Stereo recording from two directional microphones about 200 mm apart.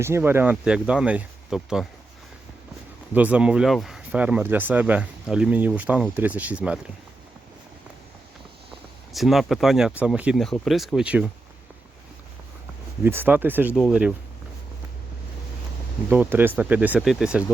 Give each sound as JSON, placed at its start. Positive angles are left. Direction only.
{"t": 0.0, "sound": "speech", "side_deg": -10}
{"t": 3.1, "sound": "speech", "side_deg": -5}
{"t": 9.1, "sound": "speech", "side_deg": 0}
{"t": 13.0, "sound": "speech", "side_deg": -10}
{"t": 16.0, "sound": "speech", "side_deg": -10}